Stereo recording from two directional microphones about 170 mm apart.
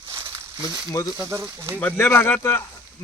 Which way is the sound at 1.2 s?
15° right (ahead or behind).